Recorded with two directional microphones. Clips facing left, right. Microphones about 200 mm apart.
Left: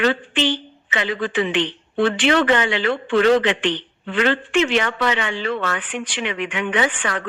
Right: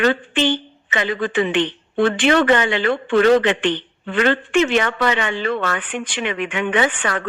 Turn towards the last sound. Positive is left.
turn(degrees=-45)  # may be behind; listen again after turning